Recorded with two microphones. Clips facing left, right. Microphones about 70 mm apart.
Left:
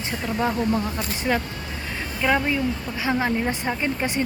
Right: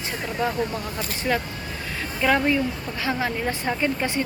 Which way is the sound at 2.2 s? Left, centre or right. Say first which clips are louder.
Right 1 dB; centre.